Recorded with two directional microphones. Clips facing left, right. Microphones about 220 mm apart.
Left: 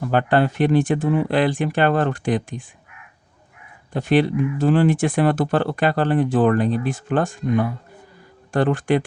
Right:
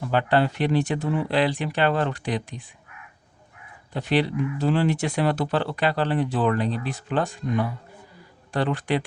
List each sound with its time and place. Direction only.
0.1 s speech: 50° left (ahead or behind)
3.9 s speech: 50° left (ahead or behind)